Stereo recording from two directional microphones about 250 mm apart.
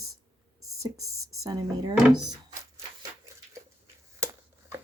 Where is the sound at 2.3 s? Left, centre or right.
Centre.